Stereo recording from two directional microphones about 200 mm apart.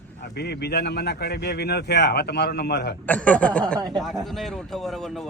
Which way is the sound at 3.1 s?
5° left (ahead or behind).